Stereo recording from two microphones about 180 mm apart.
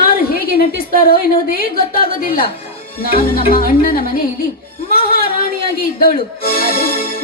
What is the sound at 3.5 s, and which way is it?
Speech, 50° left (ahead or behind).